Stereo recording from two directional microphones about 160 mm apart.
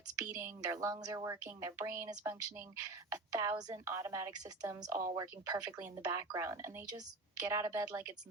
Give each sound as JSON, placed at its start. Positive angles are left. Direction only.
{"t": 0.3, "sound": "speech", "side_deg": -15}